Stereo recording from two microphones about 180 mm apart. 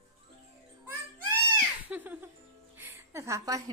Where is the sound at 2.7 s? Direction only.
10° right (ahead or behind).